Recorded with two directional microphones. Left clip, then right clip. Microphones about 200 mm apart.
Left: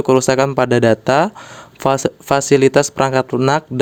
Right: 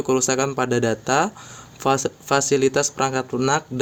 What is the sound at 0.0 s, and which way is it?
Speech, 45° left (ahead or behind).